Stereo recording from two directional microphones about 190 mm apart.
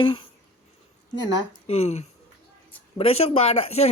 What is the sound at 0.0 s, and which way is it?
Speech, 25° left (ahead or behind).